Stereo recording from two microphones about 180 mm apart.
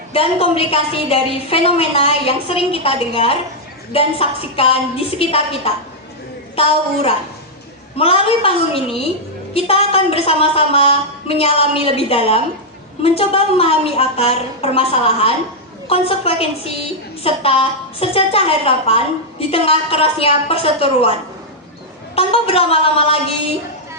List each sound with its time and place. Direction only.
0.1 s a woman's voice: 30° left (ahead or behind)
7.9 s a woman's voice: 30° left (ahead or behind)